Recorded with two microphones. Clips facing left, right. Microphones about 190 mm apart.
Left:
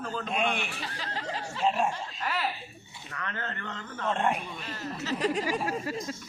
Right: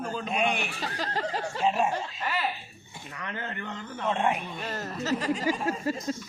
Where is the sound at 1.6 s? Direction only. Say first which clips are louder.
Right 1 dB; centre (ahead or behind).